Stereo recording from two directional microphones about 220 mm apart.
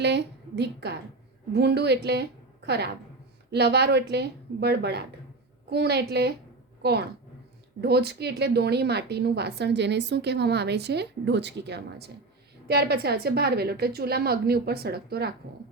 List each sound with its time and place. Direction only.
0.0 s a woman's voice: 50° right (ahead or behind)